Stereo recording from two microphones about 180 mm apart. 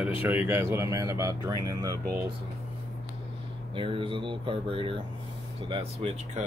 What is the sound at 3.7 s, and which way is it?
Speech, 30° right (ahead or behind).